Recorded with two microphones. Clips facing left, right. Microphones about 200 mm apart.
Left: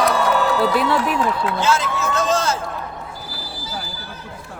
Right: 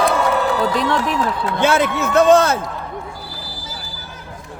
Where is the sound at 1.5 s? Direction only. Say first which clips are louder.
Right 4 dB; 60° right (ahead or behind).